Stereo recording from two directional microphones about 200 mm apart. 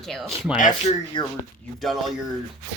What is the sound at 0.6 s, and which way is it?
Speech, 40° left (ahead or behind).